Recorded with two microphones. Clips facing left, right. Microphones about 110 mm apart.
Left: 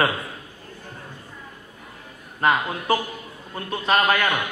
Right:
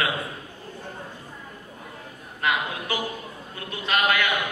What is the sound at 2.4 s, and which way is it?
A man's voice, 40° left (ahead or behind).